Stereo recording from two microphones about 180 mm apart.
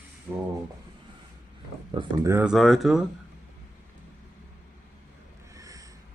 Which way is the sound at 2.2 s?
10° right (ahead or behind).